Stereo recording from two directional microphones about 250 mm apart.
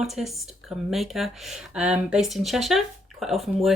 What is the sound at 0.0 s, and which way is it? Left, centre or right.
Speech, centre.